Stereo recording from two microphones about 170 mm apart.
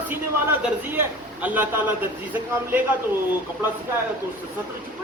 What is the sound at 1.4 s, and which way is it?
Speech, 10° right (ahead or behind).